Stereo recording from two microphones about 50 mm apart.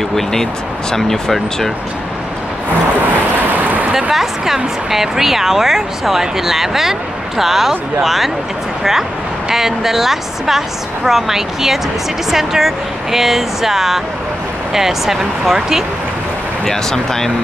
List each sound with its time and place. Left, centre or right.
0.1 s speech: centre
3.3 s vehicle: right
3.9 s a woman's voice: centre
9.5 s a woman's voice: centre
16.6 s speech: centre